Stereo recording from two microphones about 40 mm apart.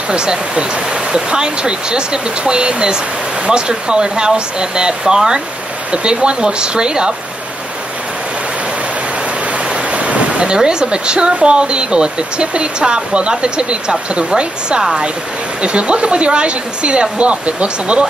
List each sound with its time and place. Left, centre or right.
0.1 s speech: right
9.8 s speech: right
14.8 s speech: centre
15.6 s speech: right